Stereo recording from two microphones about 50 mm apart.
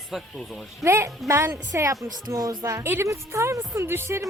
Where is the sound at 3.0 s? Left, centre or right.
Right.